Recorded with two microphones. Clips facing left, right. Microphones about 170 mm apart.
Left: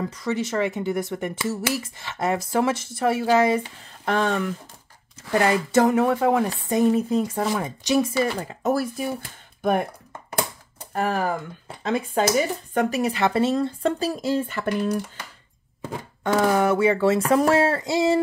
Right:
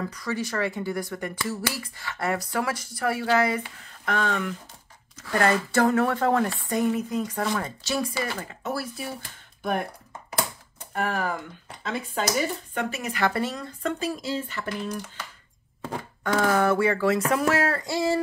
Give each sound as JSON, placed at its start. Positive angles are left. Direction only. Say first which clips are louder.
{"t": 0.1, "sound": "speech", "louder": "left 4 dB", "side_deg": 20}
{"t": 5.3, "sound": "speech", "louder": "left 3 dB", "side_deg": 15}
{"t": 7.4, "sound": "speech", "louder": "left 4 dB", "side_deg": 15}
{"t": 8.6, "sound": "speech", "louder": "left 8 dB", "side_deg": 45}
{"t": 10.9, "sound": "speech", "louder": "left 4 dB", "side_deg": 35}
{"t": 12.7, "sound": "speech", "louder": "left 7 dB", "side_deg": 35}
{"t": 15.8, "sound": "speech", "louder": "left 2 dB", "side_deg": 20}